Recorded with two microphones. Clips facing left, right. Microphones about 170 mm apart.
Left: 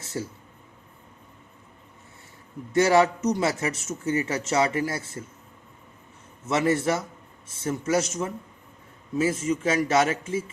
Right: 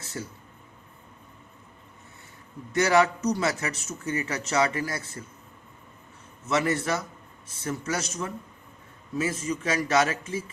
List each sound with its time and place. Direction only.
0.0 s a sound: 25° left (ahead or behind)
2.7 s speech: 25° left (ahead or behind)
6.4 s speech: 25° left (ahead or behind)